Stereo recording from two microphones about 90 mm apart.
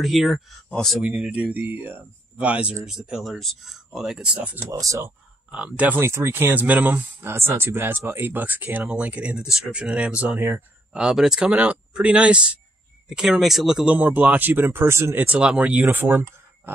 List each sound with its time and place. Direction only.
0.0 s speech: centre (ahead or behind)
1.0 s speech: 15° right (ahead or behind)
4.6 s speech: 35° right (ahead or behind)
5.5 s speech: 10° right (ahead or behind)
5.9 s speech: 30° right (ahead or behind); by 13.8 s centre (ahead or behind)
13.8 s speech: 15° right (ahead or behind)
15.2 s speech: 10° right (ahead or behind)